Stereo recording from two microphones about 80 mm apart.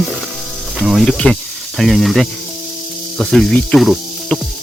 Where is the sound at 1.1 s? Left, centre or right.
Centre.